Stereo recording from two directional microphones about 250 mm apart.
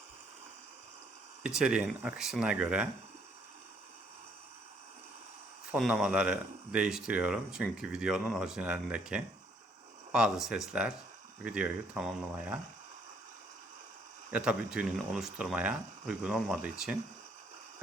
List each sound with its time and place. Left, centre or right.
1.5 s speech: centre
5.7 s speech: centre
14.3 s speech: centre